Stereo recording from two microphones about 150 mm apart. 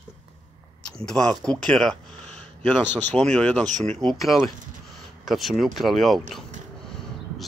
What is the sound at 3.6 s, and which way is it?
Speech, 50° right (ahead or behind).